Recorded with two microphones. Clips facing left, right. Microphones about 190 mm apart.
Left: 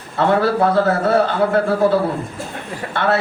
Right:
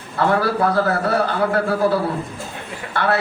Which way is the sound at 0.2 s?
25° left (ahead or behind).